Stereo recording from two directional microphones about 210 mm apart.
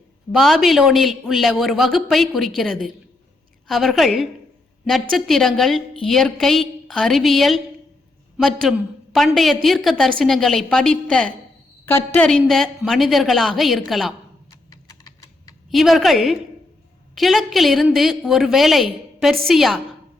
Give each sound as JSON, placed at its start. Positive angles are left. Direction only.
{"t": 0.3, "sound": "a woman's voice", "side_deg": 0}
{"t": 8.7, "sound": "a woman's voice", "side_deg": 0}
{"t": 14.5, "sound": "typing", "side_deg": 20}
{"t": 15.7, "sound": "a woman's voice", "side_deg": 0}